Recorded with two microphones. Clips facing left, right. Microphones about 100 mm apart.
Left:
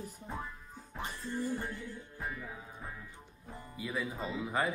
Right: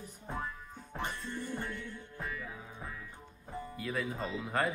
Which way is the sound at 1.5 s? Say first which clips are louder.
Left 1 dB; 60° right (ahead or behind).